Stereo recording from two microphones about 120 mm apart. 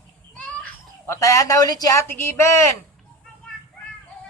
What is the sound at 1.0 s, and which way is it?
Speech, 25° left (ahead or behind).